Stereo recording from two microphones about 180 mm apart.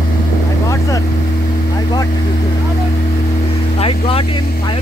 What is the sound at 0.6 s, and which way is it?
Motorboat, 15° left (ahead or behind).